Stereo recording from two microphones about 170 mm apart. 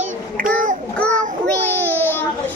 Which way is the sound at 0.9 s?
5° left (ahead or behind).